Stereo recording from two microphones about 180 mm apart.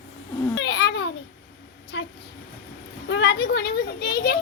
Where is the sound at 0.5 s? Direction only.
70° left (ahead or behind).